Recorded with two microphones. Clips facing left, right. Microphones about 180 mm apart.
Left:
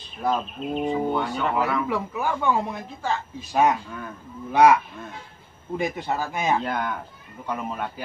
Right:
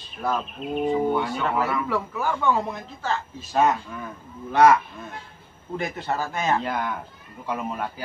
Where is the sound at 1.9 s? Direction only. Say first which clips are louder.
Even; 15° left (ahead or behind).